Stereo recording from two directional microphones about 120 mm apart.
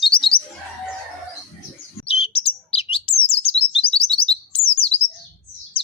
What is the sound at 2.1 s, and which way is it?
Bird, 55° left (ahead or behind).